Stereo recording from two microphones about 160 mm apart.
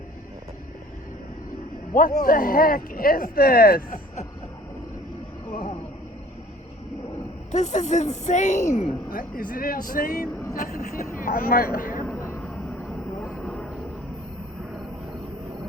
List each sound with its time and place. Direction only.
1.9 s a man's voice: 60° left (ahead or behind)
7.5 s a woman's voice: 50° left (ahead or behind)
9.0 s a man's voice: 60° left (ahead or behind)
10.5 s a sound: 55° left (ahead or behind)
12.0 s a sound: 20° left (ahead or behind)
13.2 s vehicle: centre (ahead or behind)